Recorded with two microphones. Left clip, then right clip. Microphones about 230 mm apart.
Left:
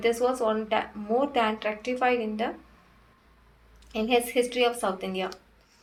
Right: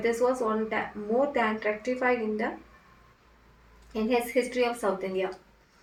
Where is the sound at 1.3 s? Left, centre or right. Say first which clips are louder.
Left 1 dB; left.